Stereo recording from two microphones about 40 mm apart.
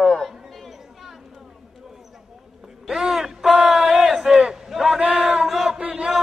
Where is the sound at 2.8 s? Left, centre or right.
Centre.